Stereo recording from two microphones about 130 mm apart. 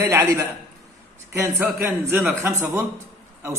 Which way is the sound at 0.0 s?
25° right (ahead or behind).